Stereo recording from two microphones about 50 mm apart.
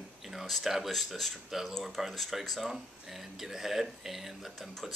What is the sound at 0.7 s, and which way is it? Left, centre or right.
Speech, centre.